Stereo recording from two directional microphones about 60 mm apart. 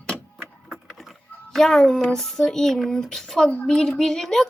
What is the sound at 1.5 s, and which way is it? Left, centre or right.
A child's voice, centre.